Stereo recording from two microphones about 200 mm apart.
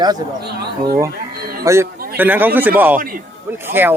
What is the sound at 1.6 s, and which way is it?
Speech, 15° right (ahead or behind).